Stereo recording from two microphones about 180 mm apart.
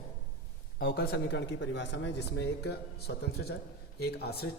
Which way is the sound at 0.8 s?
55° left (ahead or behind).